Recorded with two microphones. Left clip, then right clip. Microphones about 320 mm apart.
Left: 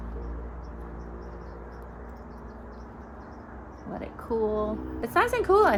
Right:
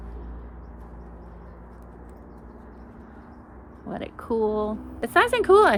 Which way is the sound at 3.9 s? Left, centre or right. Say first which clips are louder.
Right 3 dB; right.